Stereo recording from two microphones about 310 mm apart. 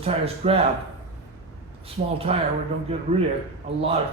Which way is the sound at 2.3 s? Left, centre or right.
Centre.